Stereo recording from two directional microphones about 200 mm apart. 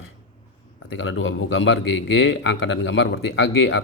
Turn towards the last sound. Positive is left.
turn(degrees=75)  # may be behind; listen again after turning